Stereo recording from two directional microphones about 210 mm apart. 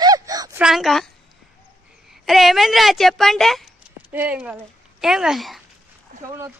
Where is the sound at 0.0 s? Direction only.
15° right (ahead or behind).